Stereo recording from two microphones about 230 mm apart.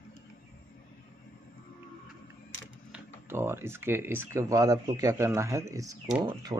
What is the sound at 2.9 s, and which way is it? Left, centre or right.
Speech, centre.